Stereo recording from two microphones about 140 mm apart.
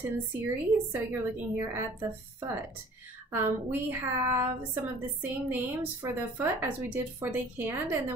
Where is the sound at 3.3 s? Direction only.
15° right (ahead or behind).